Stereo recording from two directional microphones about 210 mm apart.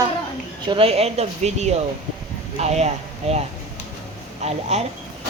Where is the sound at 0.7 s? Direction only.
25° right (ahead or behind).